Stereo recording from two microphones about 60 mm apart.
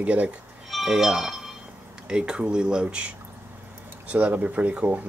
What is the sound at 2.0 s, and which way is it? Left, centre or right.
Speech, centre.